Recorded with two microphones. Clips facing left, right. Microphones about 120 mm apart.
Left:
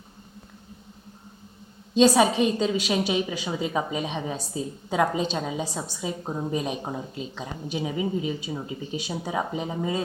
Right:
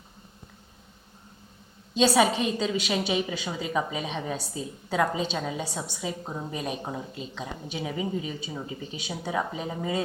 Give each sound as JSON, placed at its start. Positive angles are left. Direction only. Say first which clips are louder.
{"t": 2.2, "sound": "a woman's voice", "louder": "left 3 dB", "side_deg": 0}
{"t": 6.2, "sound": "speech", "louder": "left 5 dB", "side_deg": 15}
{"t": 6.5, "sound": "a woman's voice", "louder": "left 3 dB", "side_deg": 0}
{"t": 7.9, "sound": "speech", "louder": "left 3 dB", "side_deg": 20}